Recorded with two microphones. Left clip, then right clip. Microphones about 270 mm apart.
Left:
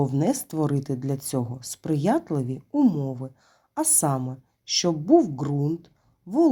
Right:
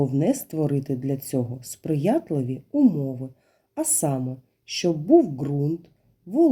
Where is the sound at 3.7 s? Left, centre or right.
Centre.